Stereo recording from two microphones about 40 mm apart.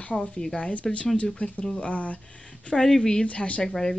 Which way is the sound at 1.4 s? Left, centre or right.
Left.